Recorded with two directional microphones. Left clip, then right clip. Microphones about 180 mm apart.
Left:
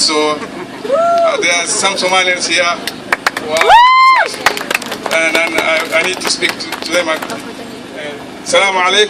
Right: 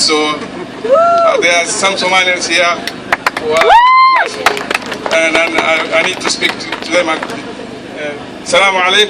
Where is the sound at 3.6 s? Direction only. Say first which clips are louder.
Left 1 dB; 55° left (ahead or behind).